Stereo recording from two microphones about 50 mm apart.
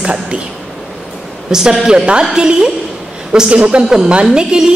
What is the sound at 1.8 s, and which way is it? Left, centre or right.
A woman's voice, centre.